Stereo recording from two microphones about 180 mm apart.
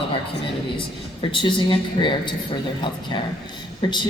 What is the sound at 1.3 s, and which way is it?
Speech, 25° left (ahead or behind).